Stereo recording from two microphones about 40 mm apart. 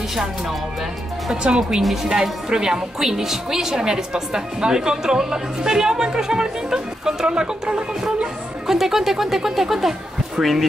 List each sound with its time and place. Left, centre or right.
0.1 s a woman's voice: centre
1.3 s a woman's voice: right
8.6 s a woman's voice: centre